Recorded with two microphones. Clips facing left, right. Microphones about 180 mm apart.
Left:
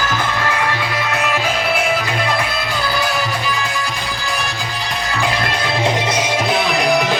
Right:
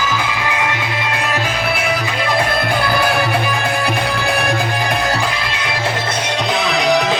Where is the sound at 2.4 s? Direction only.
55° right (ahead or behind).